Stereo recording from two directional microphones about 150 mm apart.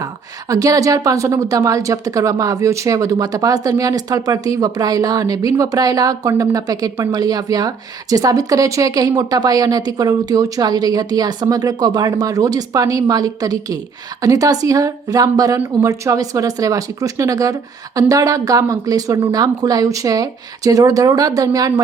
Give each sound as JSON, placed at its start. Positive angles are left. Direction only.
{"t": 0.0, "sound": "speech", "side_deg": -25}